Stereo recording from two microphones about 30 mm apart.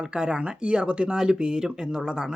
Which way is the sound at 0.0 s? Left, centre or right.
Right.